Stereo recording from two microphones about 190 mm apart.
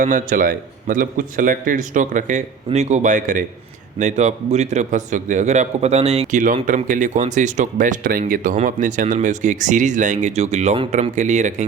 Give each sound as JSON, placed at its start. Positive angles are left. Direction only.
{"t": 0.0, "sound": "a man's voice", "side_deg": -45}